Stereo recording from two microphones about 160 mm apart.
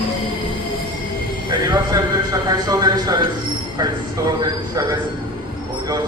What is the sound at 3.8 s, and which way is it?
Speech, 25° right (ahead or behind).